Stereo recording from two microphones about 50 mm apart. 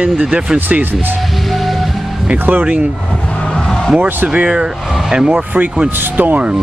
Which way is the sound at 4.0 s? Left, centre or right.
Right.